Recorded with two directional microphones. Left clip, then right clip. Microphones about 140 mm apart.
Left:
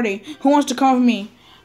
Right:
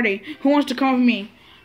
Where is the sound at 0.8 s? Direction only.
20° left (ahead or behind).